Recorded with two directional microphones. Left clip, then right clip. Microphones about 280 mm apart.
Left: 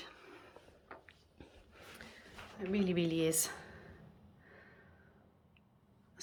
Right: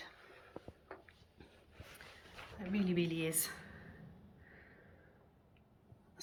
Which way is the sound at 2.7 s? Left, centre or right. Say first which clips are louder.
Left 3 dB; centre.